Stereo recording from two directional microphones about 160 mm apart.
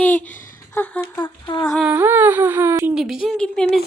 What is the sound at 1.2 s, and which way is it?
Humming, 30° left (ahead or behind).